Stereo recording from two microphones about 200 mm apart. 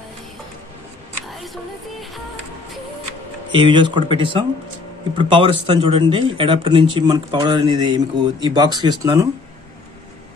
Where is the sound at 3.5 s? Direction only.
25° right (ahead or behind).